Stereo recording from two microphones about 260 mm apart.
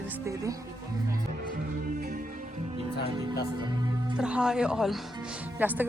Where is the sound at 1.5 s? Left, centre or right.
Right; by 4.1 s centre.